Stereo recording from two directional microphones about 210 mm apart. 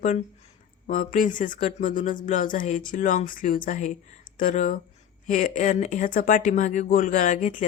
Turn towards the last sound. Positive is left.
turn(degrees=35)  # may be behind; listen again after turning